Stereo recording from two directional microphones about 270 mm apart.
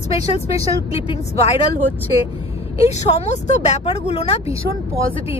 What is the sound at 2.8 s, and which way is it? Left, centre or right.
Speech, left.